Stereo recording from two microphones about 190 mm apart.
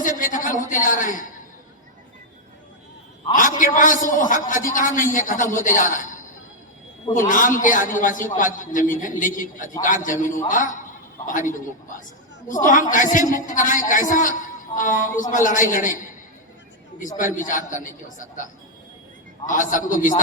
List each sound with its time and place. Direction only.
0.0 s a man's voice: 45° left (ahead or behind)
3.3 s a man's voice: 45° left (ahead or behind)
7.1 s a man's voice: 45° left (ahead or behind)
17.2 s a man's voice: 45° left (ahead or behind)
19.5 s a man's voice: 45° left (ahead or behind)